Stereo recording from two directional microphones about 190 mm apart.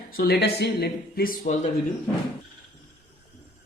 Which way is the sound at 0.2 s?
60° left (ahead or behind).